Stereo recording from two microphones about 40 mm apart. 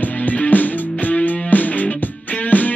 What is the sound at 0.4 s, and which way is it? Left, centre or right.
Music, left.